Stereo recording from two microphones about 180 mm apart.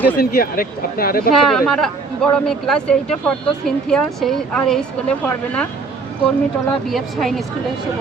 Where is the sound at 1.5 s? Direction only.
Centre (ahead or behind).